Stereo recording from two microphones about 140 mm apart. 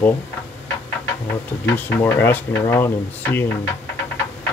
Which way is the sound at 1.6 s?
15° left (ahead or behind).